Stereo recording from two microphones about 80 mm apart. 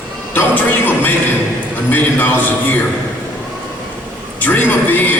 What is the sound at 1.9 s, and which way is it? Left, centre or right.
Speech, left.